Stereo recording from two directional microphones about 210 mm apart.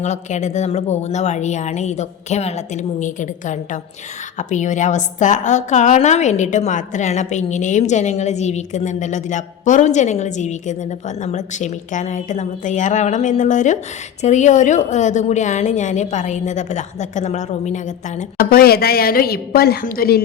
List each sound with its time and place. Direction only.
0.0 s a woman's voice: 35° left (ahead or behind)